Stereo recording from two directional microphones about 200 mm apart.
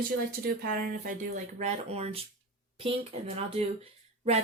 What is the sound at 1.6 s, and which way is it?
Speech, 30° right (ahead or behind).